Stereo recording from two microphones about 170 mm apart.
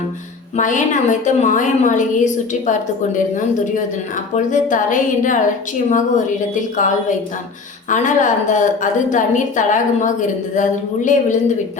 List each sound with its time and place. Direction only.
0.5 s a woman's voice: 50° left (ahead or behind)
4.4 s a woman's voice: 50° left (ahead or behind)